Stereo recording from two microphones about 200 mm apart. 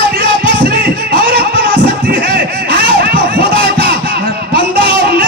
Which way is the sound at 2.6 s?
25° left (ahead or behind).